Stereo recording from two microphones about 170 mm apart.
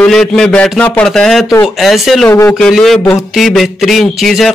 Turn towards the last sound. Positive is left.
turn(degrees=0)  # may be behind; listen again after turning